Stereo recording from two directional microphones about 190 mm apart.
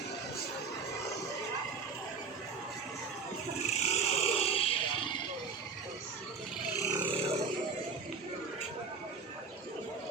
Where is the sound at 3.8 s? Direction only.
35° left (ahead or behind).